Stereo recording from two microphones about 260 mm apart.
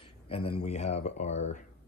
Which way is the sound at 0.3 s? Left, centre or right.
Left.